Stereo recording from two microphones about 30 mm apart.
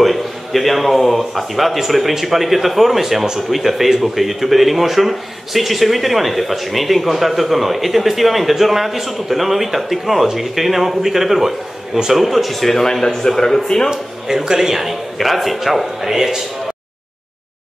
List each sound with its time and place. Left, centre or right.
0.0 s a man's voice: centre
12.4 s a man's voice: centre
13.8 s a man's voice: centre
15.1 s a man's voice: centre